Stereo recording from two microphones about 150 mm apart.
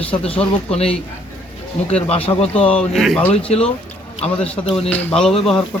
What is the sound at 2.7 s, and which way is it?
Speech, centre (ahead or behind).